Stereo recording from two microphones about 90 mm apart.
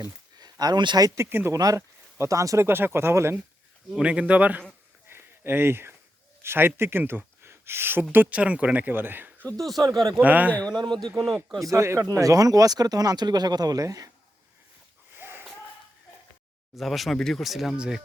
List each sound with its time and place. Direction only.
0.6 s speech: 55° right (ahead or behind)
1.0 s speech: 30° right (ahead or behind)
1.5 s speech: 40° right (ahead or behind)
2.6 s speech: 25° right (ahead or behind)
3.9 s speech: 10° right (ahead or behind)
5.0 s a sound: 25° right (ahead or behind)
6.4 s speech: 25° right (ahead or behind)
9.6 s speech: centre (ahead or behind)
10.2 s speech: 20° right (ahead or behind)
10.7 s a man's voice: 55° right (ahead or behind)
11.6 s speech: 35° right (ahead or behind)
15.1 s wheeze: 25° right (ahead or behind)
16.7 s speech: centre (ahead or behind)